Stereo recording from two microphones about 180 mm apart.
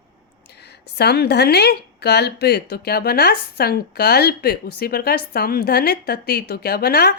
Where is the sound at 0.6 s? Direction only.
65° left (ahead or behind).